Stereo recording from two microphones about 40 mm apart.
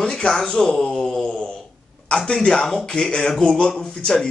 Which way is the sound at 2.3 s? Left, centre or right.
Centre.